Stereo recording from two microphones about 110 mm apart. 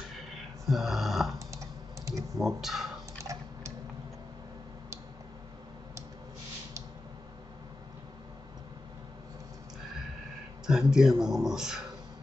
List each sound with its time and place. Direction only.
0.7 s a sound: centre (ahead or behind)
2.3 s speech: centre (ahead or behind)
3.3 s typing: 30° right (ahead or behind)
10.7 s speech: 5° right (ahead or behind)